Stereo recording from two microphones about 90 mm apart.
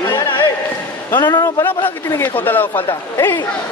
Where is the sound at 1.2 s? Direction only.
50° left (ahead or behind).